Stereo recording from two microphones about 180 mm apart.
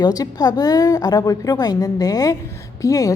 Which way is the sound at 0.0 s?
20° left (ahead or behind).